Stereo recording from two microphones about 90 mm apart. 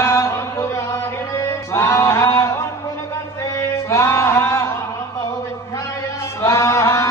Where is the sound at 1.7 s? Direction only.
30° left (ahead or behind).